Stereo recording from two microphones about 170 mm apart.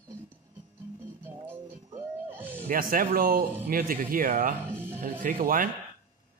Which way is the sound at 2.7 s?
55° right (ahead or behind).